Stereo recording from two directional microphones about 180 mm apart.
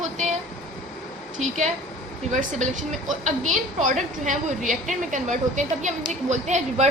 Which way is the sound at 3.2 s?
45° right (ahead or behind).